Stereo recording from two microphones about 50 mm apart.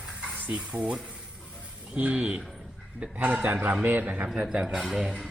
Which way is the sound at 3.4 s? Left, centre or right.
Right.